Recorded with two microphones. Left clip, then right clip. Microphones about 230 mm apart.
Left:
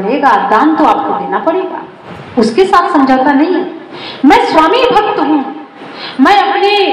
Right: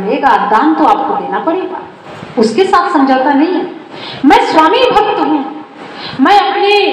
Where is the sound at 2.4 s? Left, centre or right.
Left.